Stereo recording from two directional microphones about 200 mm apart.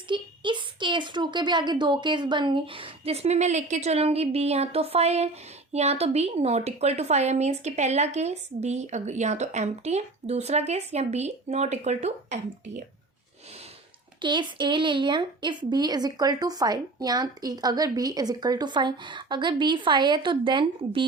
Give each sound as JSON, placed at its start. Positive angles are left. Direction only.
{"t": 0.1, "sound": "a woman's voice", "side_deg": -25}
{"t": 14.2, "sound": "a woman's voice", "side_deg": -25}